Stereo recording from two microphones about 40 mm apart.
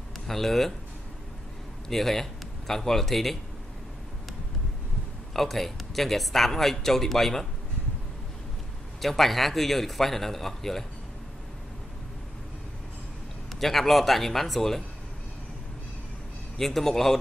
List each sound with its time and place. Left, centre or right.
0.3 s speech: centre
1.9 s speech: centre
5.3 s speech: centre
9.0 s speech: centre
13.6 s speech: centre
16.5 s a man's voice: centre